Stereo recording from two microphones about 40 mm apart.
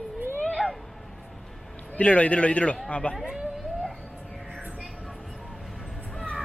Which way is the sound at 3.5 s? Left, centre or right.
Centre.